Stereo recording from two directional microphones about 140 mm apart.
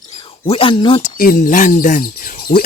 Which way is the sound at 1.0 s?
80° left.